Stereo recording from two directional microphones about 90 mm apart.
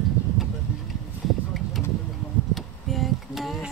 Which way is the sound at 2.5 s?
Centre (ahead or behind).